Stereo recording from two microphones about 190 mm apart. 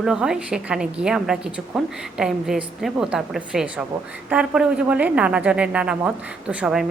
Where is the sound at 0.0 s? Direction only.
5° right (ahead or behind).